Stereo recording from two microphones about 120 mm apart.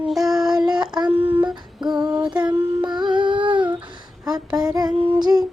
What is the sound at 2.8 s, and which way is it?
Music, 40° right (ahead or behind).